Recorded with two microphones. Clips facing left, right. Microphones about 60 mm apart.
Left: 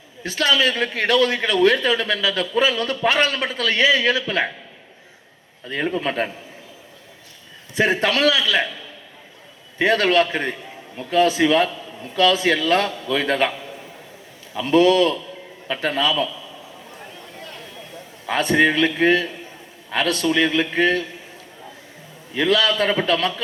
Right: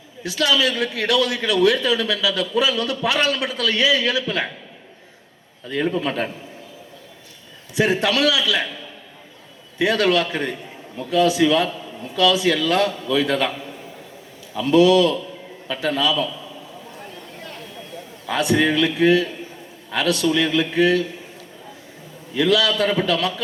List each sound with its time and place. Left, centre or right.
0.2 s a man's voice: left
5.6 s a man's voice: left
7.8 s a man's voice: left
9.7 s a man's voice: left
14.5 s a man's voice: left
18.3 s a man's voice: left
22.3 s a man's voice: left